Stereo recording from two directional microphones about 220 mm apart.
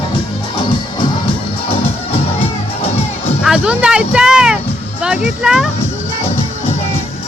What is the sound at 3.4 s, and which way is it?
Speech, 5° right (ahead or behind).